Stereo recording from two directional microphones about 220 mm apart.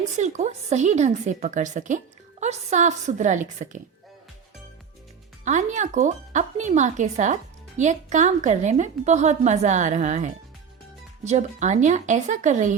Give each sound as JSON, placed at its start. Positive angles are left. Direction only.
{"t": 0.2, "sound": "a woman's voice", "side_deg": -30}
{"t": 5.5, "sound": "a woman's voice", "side_deg": -35}